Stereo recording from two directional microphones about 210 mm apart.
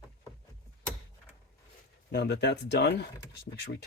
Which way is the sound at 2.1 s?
55° left (ahead or behind).